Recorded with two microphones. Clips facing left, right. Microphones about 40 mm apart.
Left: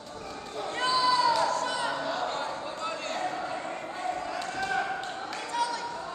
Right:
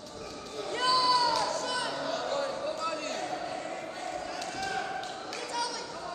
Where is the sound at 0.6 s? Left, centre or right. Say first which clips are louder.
Left 1 dB; left.